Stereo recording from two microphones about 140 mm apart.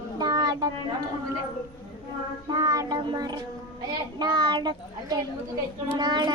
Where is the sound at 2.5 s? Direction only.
25° right (ahead or behind).